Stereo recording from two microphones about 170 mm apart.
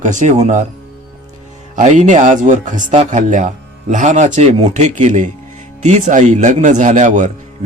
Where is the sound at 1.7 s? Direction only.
45° right (ahead or behind).